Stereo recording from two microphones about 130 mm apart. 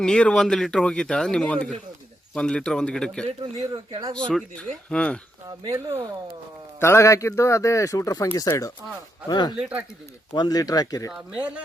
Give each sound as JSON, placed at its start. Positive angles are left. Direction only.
{"t": 0.0, "sound": "speech", "side_deg": 5}
{"t": 3.2, "sound": "a man's voice", "side_deg": -55}
{"t": 3.7, "sound": "speech", "side_deg": -30}
{"t": 4.1, "sound": "speech", "side_deg": 5}
{"t": 6.7, "sound": "speech", "side_deg": 20}
{"t": 9.6, "sound": "speech", "side_deg": -5}
{"t": 10.3, "sound": "speech", "side_deg": 30}
{"t": 11.1, "sound": "speech", "side_deg": -10}